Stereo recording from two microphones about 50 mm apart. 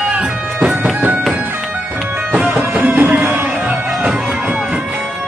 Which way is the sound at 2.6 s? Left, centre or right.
Right.